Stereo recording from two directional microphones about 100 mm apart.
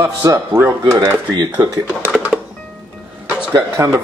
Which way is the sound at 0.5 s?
25° right (ahead or behind).